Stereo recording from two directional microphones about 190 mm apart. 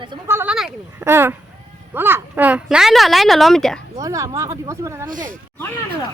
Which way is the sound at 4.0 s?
15° right (ahead or behind).